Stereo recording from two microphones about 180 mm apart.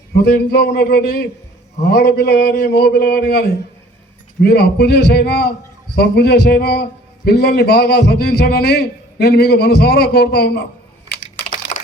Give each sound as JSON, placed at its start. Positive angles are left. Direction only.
{"t": 0.1, "sound": "a man's voice", "side_deg": 60}
{"t": 11.7, "sound": "typing", "side_deg": 40}